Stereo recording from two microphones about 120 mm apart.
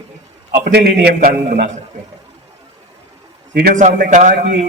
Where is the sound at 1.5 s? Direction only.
85° right.